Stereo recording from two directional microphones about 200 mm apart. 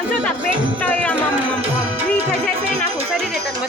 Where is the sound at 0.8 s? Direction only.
5° left (ahead or behind).